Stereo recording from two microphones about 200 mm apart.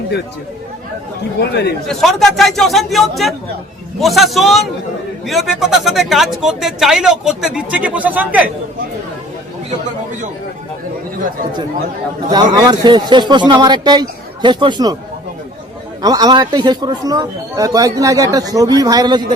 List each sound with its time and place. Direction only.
1.4 s speech: 55° left (ahead or behind)
1.9 s speech: centre (ahead or behind)
12.3 s speech: 20° right (ahead or behind)
16.0 s speech: 20° right (ahead or behind)